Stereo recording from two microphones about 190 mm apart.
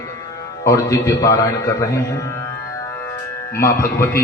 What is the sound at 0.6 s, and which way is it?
A man's voice, 15° left (ahead or behind).